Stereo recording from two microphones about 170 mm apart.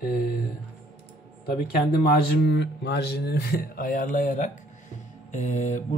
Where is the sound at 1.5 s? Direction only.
60° left (ahead or behind).